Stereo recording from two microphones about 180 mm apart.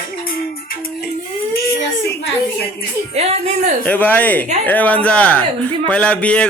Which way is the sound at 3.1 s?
35° right (ahead or behind).